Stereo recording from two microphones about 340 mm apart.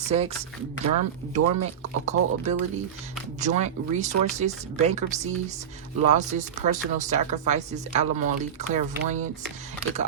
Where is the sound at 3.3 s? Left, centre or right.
Right.